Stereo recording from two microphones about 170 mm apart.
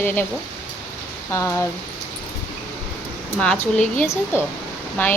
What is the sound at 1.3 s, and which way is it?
Speech, 15° left (ahead or behind).